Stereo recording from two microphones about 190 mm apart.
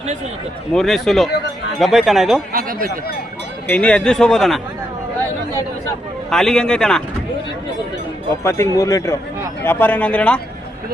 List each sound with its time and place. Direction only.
0.7 s a man's voice: centre (ahead or behind)
2.5 s speech: 50° right (ahead or behind)
3.7 s a man's voice: 5° left (ahead or behind)
6.3 s a man's voice: 5° left (ahead or behind)
8.4 s speech: 15° left (ahead or behind)